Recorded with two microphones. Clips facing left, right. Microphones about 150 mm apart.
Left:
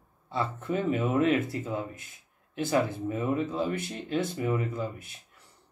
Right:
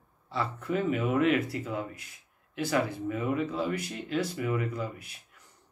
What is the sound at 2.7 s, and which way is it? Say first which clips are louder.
Speech: left 2 dB; 25° left (ahead or behind).